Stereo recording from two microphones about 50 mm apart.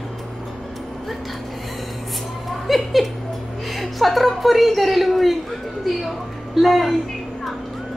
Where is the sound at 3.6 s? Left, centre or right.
Centre.